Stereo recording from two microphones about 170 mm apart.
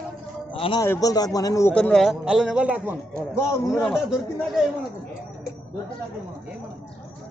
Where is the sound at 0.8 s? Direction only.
20° left (ahead or behind).